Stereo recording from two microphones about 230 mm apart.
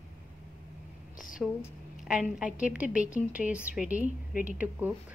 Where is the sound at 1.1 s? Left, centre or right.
Left.